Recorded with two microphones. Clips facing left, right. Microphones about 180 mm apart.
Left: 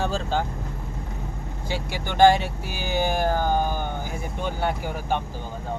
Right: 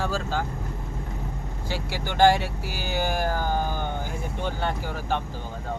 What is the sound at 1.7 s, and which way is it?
Speech, 15° left (ahead or behind).